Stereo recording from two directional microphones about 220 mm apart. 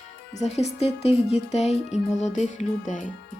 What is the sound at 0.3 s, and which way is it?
Speech, 30° left (ahead or behind).